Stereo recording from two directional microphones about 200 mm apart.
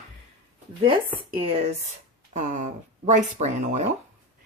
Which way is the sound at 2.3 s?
40° right (ahead or behind).